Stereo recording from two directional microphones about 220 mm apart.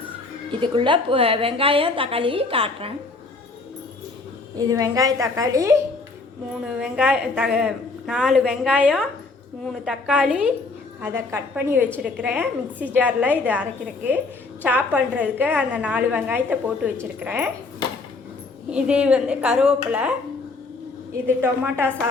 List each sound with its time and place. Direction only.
0.6 s a woman's voice: 20° right (ahead or behind)
4.5 s a woman's voice: 15° right (ahead or behind)
6.5 s a woman's voice: centre (ahead or behind)
18.7 s a woman's voice: 5° right (ahead or behind)
21.2 s a woman's voice: 10° right (ahead or behind)